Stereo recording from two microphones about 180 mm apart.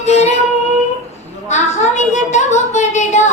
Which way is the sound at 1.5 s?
40° left (ahead or behind).